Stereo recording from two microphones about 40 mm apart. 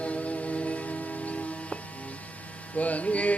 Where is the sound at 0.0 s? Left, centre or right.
Left.